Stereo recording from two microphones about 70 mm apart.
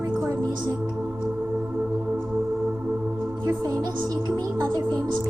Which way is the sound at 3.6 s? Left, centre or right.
Right.